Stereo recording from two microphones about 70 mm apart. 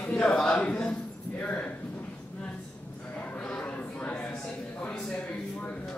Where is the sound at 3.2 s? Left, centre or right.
Centre.